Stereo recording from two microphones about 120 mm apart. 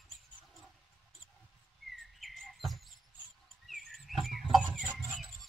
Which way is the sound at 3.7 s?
Centre (ahead or behind).